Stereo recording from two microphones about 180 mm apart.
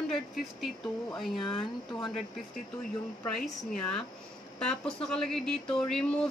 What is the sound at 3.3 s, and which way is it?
A woman's voice, 5° left (ahead or behind).